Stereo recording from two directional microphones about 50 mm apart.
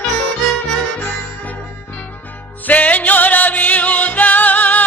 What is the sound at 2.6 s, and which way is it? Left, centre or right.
Music, left.